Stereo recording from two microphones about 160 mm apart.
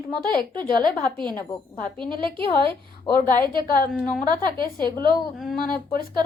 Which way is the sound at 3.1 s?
60° left (ahead or behind).